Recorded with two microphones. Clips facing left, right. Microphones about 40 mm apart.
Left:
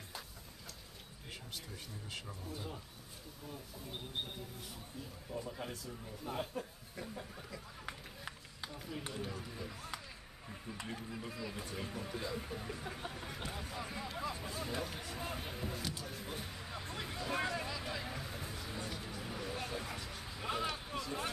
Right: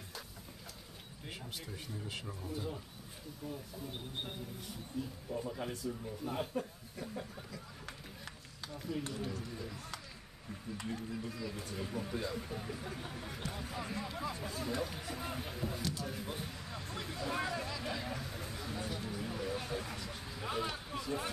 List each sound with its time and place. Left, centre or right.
2.0 s speech: centre
7.5 s a sound: centre
8.7 s speech: centre
11.9 s speech: centre
13.7 s speech: centre
16.0 s a sound: centre